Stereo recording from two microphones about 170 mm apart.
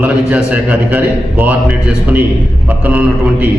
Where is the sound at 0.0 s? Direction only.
10° right (ahead or behind).